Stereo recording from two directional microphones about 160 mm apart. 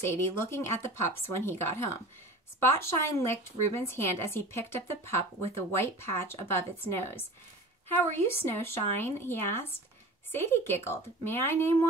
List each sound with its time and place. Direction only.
0.0 s a woman's voice: 15° left (ahead or behind)